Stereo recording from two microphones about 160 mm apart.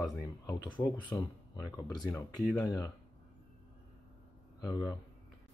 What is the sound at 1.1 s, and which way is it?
Speech, 15° left (ahead or behind).